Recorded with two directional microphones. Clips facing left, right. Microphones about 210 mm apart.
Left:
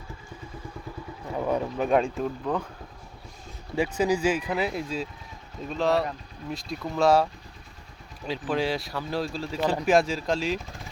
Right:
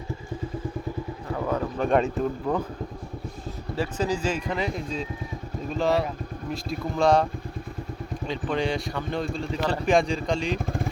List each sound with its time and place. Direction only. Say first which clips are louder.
1.3 s boat: left 1 dB; 15° left (ahead or behind)
1.8 s speech: right 2 dB; centre (ahead or behind)
3.8 s speech: left 3 dB; 10° left (ahead or behind)
8.3 s speech: even; 5° left (ahead or behind)
10.6 s speech: right 13 dB; 55° right (ahead or behind)